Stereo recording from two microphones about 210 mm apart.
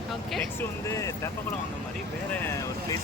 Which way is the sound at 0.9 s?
15° left (ahead or behind).